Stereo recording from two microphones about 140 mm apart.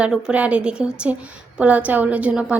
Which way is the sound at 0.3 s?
10° right (ahead or behind).